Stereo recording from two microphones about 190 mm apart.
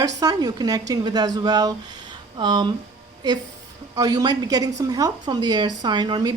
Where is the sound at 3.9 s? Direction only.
20° right (ahead or behind).